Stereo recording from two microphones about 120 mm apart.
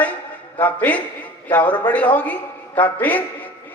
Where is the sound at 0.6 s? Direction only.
15° left (ahead or behind).